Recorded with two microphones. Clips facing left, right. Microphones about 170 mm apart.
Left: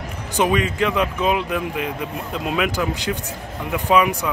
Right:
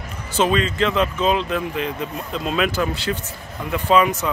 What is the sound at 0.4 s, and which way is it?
Speech, 15° left (ahead or behind).